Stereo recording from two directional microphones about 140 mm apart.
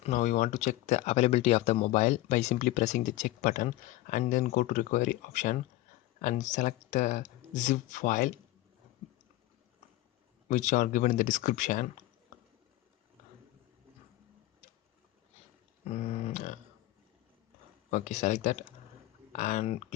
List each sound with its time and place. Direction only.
0.0 s speech: 60° left (ahead or behind)
10.5 s speech: 60° left (ahead or behind)
15.8 s a sound: 50° left (ahead or behind)
17.9 s speech: 60° left (ahead or behind)